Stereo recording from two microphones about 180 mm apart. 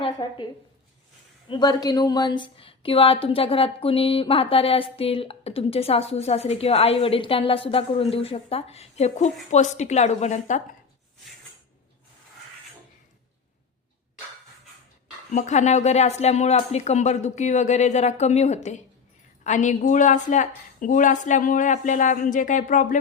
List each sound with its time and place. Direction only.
0.0 s a woman's voice: 25° left (ahead or behind)
1.5 s a woman's voice: 25° left (ahead or behind); by 10.6 s 40° left (ahead or behind)
15.3 s a woman's voice: 40° left (ahead or behind)